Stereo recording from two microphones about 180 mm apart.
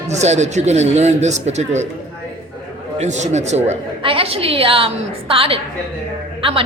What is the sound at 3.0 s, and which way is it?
A woman's voice, 40° right (ahead or behind).